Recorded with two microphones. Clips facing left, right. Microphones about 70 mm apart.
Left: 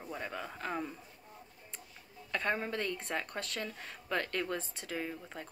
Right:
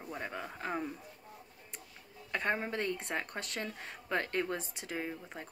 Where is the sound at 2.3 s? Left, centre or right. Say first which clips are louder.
Even; right.